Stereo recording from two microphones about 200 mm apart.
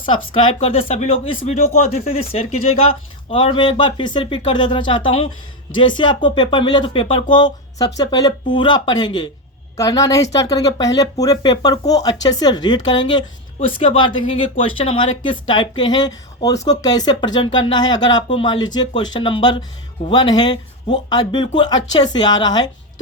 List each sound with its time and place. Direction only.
0.3 s a woman's voice: 25° left (ahead or behind)